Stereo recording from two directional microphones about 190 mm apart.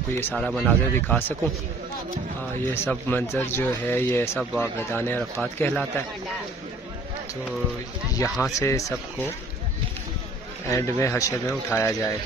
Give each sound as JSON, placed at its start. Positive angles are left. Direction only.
{"t": 0.4, "sound": "speech", "side_deg": 5}
{"t": 2.7, "sound": "speech", "side_deg": 10}
{"t": 8.1, "sound": "speech", "side_deg": 15}
{"t": 10.7, "sound": "speech", "side_deg": 15}